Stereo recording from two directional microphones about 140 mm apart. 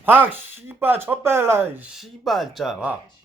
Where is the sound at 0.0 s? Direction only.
15° right (ahead or behind).